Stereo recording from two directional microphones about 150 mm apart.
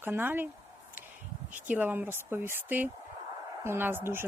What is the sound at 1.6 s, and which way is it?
A woman's voice, 10° right (ahead or behind).